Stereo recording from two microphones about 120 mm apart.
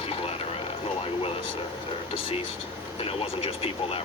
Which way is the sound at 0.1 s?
55° left (ahead or behind).